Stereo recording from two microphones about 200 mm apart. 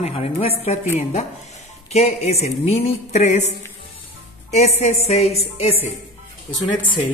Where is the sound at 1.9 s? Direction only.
30° left (ahead or behind).